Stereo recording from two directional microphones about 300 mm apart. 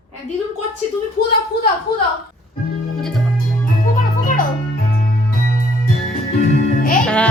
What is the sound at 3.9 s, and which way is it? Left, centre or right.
Music, left.